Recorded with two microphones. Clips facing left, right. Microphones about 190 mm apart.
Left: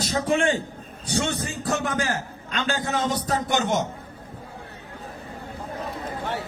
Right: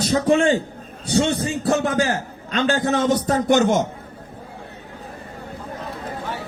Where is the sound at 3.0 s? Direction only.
50° right (ahead or behind).